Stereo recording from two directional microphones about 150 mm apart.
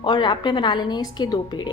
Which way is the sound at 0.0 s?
30° left (ahead or behind).